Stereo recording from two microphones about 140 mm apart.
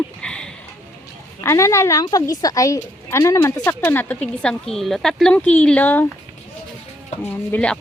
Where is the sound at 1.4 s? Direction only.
20° left (ahead or behind).